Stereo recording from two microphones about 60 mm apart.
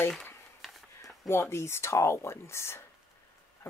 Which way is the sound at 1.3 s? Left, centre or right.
Left.